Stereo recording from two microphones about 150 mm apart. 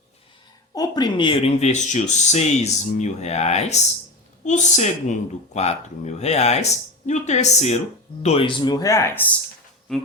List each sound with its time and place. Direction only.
0.7 s speech: 25° left (ahead or behind)
9.9 s speech: 5° left (ahead or behind)